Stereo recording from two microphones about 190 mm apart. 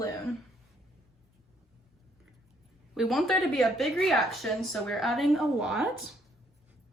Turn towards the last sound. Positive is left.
turn(degrees=0)  # may be behind; listen again after turning